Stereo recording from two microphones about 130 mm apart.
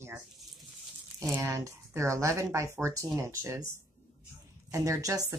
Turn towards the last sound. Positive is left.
turn(degrees=-25)  # may be behind; listen again after turning